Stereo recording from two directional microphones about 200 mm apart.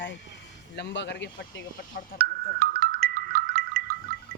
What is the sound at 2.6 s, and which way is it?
Music, 50° right (ahead or behind).